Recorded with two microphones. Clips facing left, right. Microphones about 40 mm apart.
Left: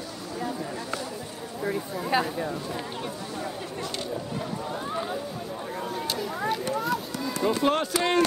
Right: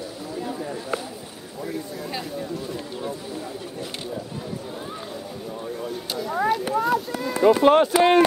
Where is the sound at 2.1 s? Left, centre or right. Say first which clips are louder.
Left 7 dB; left.